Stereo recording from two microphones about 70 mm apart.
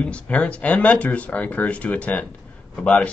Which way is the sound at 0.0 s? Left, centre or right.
Centre.